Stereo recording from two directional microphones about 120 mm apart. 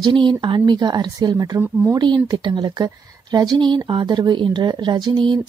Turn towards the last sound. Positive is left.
turn(degrees=-40)  # may be behind; listen again after turning